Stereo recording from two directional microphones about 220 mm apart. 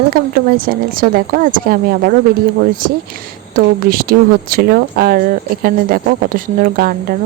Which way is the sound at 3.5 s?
40° right (ahead or behind).